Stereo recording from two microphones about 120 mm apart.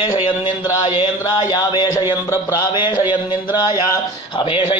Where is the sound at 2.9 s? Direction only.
15° right (ahead or behind).